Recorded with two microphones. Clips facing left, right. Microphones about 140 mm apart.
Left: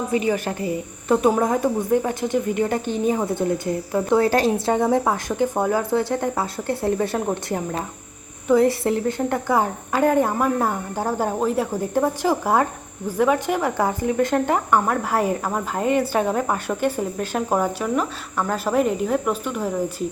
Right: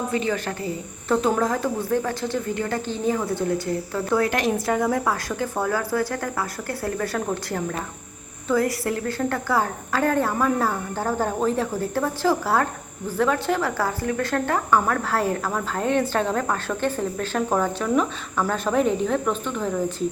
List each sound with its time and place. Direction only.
0.1 s speech: 15° left (ahead or behind)